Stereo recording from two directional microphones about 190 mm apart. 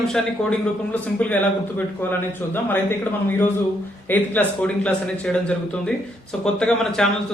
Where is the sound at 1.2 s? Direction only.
5° left (ahead or behind).